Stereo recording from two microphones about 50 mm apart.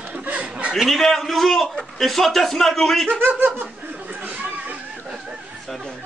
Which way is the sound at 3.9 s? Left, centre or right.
Right.